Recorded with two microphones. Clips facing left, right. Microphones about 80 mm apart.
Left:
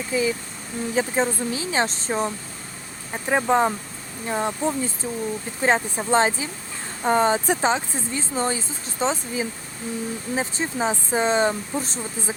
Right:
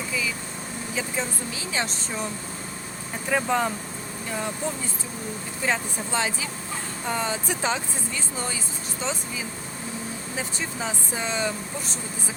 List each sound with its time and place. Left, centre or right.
0.1 s speech: left
5.6 s speech: left